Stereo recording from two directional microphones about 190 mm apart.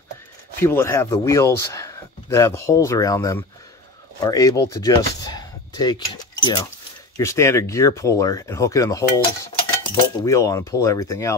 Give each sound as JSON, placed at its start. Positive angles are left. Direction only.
{"t": 0.6, "sound": "speech", "side_deg": 15}